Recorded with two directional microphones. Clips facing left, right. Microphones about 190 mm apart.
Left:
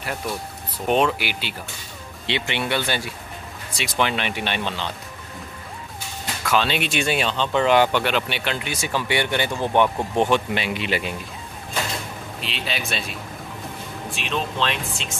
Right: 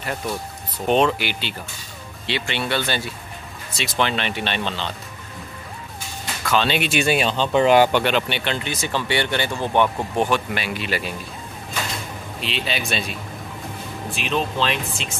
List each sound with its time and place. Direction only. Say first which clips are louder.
0.8 s speech: right 2 dB; 5° left (ahead or behind)
2.2 s speech: even; 20° left (ahead or behind)
6.4 s speech: right 1 dB; 5° left (ahead or behind)
8.0 s speech: right 2 dB; centre (ahead or behind); by 11.1 s 20° left (ahead or behind)
12.4 s speech: right 3 dB; centre (ahead or behind)
14.1 s speech: right 3 dB; centre (ahead or behind)